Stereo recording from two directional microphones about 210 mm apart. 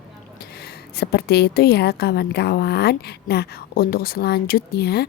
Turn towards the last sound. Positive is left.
turn(degrees=50)  # may be behind; listen again after turning